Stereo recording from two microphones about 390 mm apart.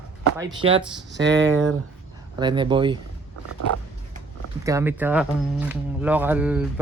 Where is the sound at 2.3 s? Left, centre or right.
Centre.